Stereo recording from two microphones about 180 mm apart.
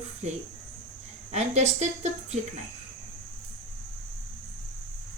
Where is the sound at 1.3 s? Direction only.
35° right (ahead or behind).